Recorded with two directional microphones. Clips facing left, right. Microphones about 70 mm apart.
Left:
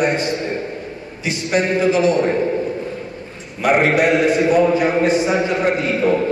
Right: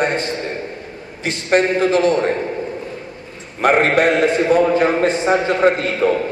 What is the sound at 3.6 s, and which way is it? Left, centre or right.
A man's voice, right.